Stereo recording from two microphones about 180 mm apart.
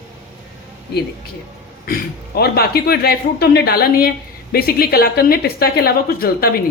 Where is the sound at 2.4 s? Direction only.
60° left (ahead or behind).